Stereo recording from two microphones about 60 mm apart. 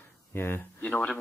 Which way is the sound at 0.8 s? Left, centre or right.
Left.